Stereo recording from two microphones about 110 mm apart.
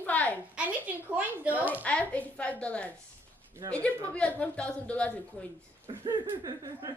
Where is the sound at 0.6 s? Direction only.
15° right (ahead or behind).